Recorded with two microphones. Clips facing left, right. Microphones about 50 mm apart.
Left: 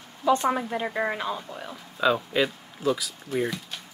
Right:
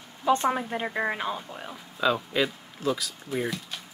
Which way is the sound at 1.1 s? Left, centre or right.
Right.